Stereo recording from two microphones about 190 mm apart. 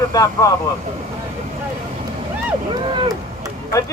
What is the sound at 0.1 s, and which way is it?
Speech, 20° left (ahead or behind).